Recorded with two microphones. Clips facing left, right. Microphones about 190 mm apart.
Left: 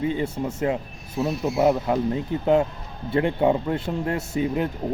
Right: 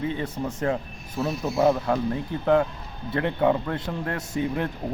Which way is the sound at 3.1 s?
25° left (ahead or behind).